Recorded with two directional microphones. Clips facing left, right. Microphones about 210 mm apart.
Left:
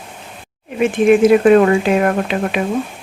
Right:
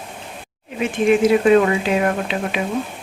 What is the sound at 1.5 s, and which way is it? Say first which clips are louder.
Speech: left 4 dB; 55° left (ahead or behind).